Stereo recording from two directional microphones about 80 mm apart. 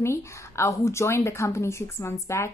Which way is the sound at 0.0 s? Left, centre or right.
Left.